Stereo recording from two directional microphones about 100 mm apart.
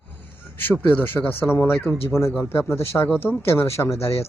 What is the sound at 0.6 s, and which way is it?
Speech, 20° left (ahead or behind).